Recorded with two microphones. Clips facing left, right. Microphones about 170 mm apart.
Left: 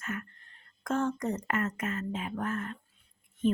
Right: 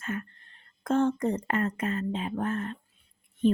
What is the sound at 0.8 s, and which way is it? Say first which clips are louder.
Speech: right 5 dB; 30° right (ahead or behind).